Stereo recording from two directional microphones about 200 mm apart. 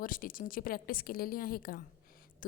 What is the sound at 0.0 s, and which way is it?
A woman's voice, 45° left (ahead or behind).